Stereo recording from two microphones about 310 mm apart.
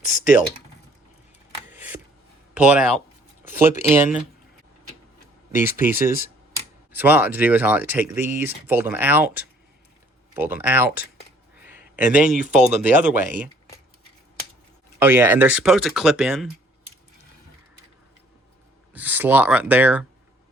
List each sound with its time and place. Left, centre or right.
0.0 s typing: left
1.7 s a sound: centre
2.6 s speech: centre
5.5 s speech: centre
10.3 s speech: centre
12.3 s speech: centre
14.9 s speech: centre
18.9 s speech: centre